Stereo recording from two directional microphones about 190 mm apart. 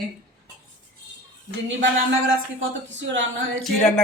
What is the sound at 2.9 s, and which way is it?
Speech, 70° right (ahead or behind).